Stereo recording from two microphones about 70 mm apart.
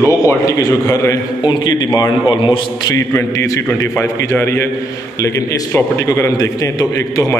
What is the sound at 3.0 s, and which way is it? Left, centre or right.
Speech, left.